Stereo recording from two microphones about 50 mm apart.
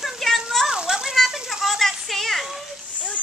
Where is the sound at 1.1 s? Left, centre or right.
Centre.